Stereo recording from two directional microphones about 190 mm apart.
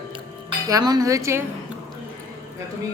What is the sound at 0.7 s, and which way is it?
Speech, 20° right (ahead or behind).